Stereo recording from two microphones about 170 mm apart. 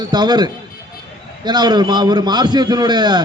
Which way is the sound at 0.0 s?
25° right (ahead or behind).